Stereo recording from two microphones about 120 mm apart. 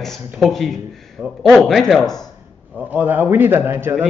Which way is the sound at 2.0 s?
30° left (ahead or behind).